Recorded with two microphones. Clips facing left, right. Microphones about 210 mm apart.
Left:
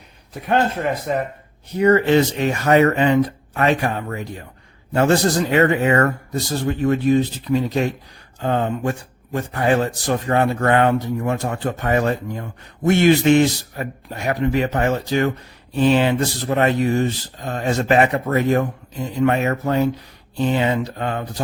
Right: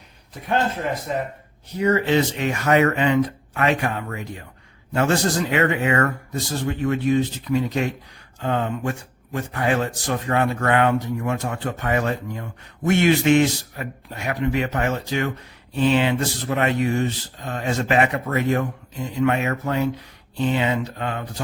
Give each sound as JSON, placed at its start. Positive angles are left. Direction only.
{"t": 1.1, "sound": "speech", "side_deg": 60}
{"t": 2.4, "sound": "a man's voice", "side_deg": 35}